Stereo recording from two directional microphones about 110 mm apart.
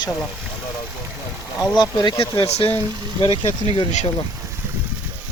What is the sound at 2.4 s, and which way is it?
Speech, 70° left (ahead or behind).